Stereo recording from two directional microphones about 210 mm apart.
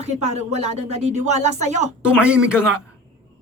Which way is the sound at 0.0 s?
30° right (ahead or behind).